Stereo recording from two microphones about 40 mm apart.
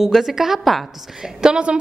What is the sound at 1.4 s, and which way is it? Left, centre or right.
Speech, right.